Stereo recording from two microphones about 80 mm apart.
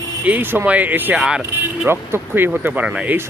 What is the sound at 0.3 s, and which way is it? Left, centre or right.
Speech, right.